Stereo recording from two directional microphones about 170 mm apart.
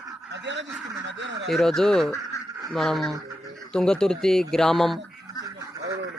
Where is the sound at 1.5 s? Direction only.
Centre (ahead or behind).